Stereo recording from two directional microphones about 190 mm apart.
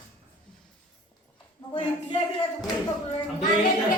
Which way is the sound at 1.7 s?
30° left (ahead or behind).